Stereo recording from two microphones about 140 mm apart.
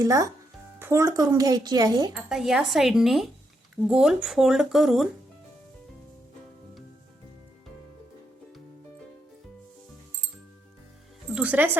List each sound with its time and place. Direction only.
0.0 s speech: 25° right (ahead or behind)
2.1 s speech: 5° right (ahead or behind)
11.3 s speech: 10° right (ahead or behind)